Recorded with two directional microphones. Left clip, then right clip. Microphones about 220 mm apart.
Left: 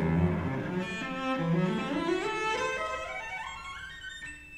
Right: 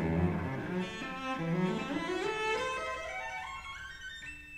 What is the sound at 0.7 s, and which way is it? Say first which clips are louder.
Cello: left 4 dB; 10° left (ahead or behind).